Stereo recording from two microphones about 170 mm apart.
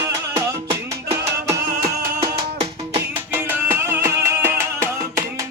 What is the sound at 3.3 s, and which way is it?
Music, 15° right (ahead or behind).